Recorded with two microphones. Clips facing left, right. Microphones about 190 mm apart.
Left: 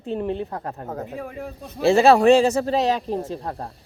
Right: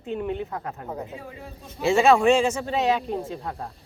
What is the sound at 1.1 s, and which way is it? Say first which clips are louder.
Speech: left 6 dB; 65° left (ahead or behind).